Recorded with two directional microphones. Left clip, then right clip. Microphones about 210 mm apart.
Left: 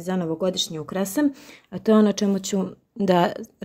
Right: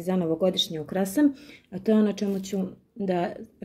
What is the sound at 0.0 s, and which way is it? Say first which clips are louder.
Speech: even; 25° left (ahead or behind).